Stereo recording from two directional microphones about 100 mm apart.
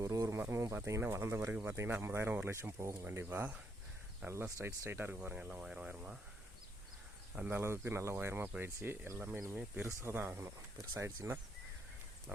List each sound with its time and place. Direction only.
0.0 s speech: 35° right (ahead or behind); by 3.6 s 15° right (ahead or behind)
4.3 s speech: 30° right (ahead or behind); by 6.1 s 10° right (ahead or behind)
7.3 s speech: 15° right (ahead or behind)
7.6 s speech: 25° right (ahead or behind)